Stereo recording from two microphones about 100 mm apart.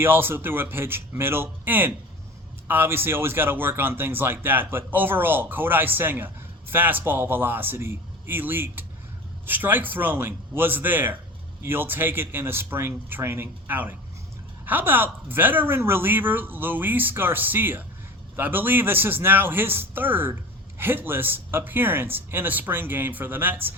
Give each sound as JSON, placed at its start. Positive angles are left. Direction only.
{"t": 0.0, "sound": "speech", "side_deg": -20}